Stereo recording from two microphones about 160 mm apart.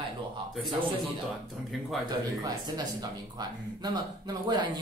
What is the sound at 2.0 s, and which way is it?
Speech, 25° right (ahead or behind).